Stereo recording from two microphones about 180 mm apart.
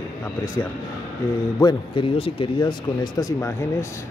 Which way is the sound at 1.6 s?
25° left (ahead or behind).